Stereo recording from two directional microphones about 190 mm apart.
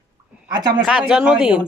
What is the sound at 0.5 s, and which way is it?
Speech, 20° right (ahead or behind).